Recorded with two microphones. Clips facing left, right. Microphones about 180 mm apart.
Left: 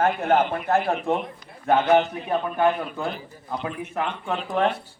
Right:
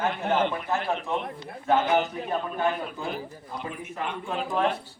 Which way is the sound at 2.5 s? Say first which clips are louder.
Left 5 dB; 65° left (ahead or behind).